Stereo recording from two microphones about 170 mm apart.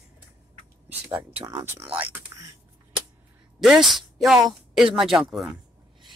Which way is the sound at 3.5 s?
Centre (ahead or behind).